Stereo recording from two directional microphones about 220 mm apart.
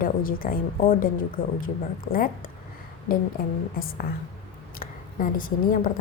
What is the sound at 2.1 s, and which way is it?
Speech, 40° left (ahead or behind).